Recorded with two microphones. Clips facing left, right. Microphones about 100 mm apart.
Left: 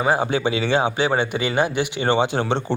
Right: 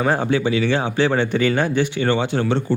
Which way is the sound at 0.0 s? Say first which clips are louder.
Right 1 dB; 10° left (ahead or behind).